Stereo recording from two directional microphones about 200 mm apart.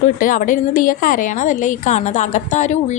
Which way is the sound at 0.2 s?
40° left (ahead or behind).